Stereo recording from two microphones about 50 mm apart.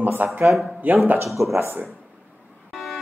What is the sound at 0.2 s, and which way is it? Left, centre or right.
Speech, right.